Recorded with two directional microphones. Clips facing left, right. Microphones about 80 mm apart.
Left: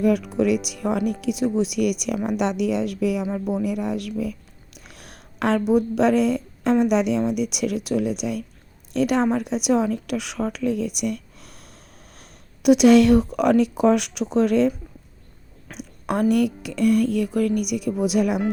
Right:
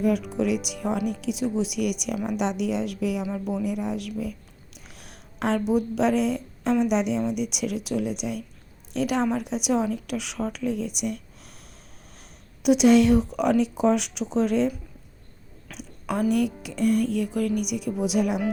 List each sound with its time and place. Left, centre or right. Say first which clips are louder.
0.0 s speech: left 4 dB; left
3.2 s speech: left 4 dB; left
3.6 s a sound: left 3 dB; left
5.7 s a woman's voice: left 5 dB; left
15.8 s a sound: left 4 dB; left
16.3 s speech: left 4 dB; left